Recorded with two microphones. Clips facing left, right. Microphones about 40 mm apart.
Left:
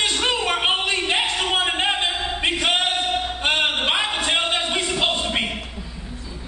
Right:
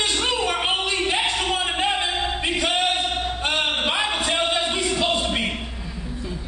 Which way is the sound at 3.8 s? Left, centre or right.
Left.